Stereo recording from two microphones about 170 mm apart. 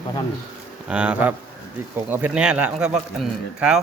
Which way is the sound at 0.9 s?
5° right (ahead or behind).